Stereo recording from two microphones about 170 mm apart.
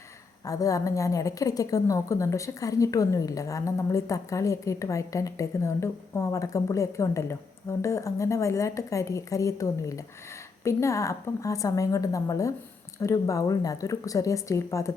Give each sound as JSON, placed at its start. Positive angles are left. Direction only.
{"t": 0.4, "sound": "a woman's voice", "side_deg": 20}